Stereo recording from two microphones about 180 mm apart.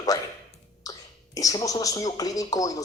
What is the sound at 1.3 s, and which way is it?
Speech, 20° left (ahead or behind).